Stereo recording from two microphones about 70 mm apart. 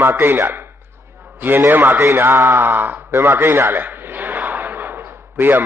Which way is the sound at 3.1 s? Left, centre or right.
Right.